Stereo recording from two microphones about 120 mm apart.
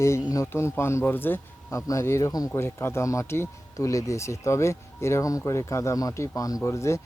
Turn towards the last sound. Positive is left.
turn(degrees=25)  # may be behind; listen again after turning